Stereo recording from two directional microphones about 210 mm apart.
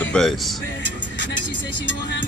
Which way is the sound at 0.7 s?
60° left (ahead or behind).